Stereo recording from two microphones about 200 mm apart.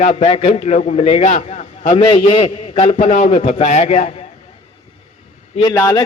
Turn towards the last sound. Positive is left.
turn(degrees=15)  # may be behind; listen again after turning